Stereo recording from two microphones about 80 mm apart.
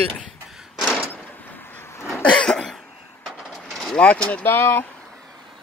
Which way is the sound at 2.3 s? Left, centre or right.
Centre.